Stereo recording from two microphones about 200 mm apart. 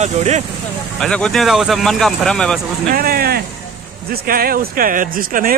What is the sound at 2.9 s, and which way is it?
Speech, 50° right (ahead or behind).